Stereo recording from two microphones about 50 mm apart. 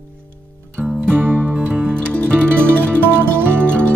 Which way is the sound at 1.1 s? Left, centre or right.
Right.